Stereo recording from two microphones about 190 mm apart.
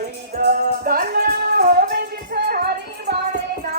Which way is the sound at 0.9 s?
50° right (ahead or behind).